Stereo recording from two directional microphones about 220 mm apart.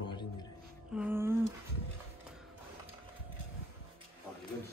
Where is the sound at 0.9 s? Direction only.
10° right (ahead or behind).